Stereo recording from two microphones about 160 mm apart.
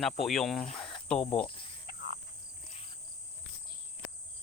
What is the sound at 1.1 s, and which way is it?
Speech, 5° left (ahead or behind).